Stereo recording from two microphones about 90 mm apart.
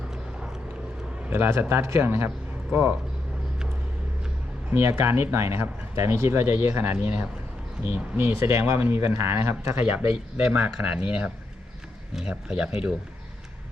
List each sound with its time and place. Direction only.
1.3 s speech: 25° right (ahead or behind)
4.8 s speech: 25° right (ahead or behind)
9.7 s speech: 15° right (ahead or behind)